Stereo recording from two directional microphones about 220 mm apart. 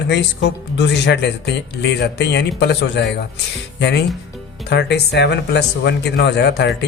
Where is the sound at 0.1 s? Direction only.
50° left (ahead or behind).